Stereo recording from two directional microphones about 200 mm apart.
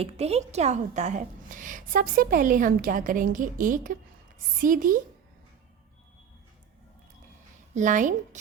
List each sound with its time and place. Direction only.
0.0 s a woman's voice: 30° right (ahead or behind)
7.8 s a woman's voice: 40° right (ahead or behind)